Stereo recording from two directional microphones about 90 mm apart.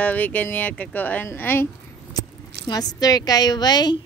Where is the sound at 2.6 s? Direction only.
45° left (ahead or behind).